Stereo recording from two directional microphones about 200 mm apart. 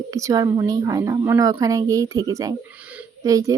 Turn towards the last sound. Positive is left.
turn(degrees=-15)  # may be behind; listen again after turning